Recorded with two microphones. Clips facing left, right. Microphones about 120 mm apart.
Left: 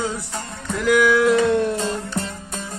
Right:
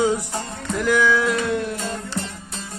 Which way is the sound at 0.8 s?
5° left (ahead or behind).